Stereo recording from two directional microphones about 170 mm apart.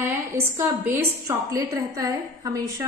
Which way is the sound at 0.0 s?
15° right (ahead or behind).